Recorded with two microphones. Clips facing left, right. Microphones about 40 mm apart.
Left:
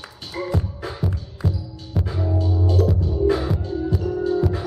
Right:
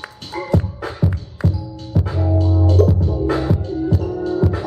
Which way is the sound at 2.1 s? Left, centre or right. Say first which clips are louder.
Right 4 dB; centre.